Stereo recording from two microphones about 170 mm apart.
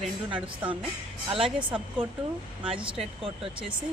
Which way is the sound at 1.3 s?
5° right (ahead or behind).